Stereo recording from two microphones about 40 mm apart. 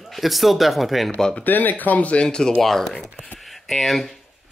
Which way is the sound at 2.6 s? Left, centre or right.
Centre.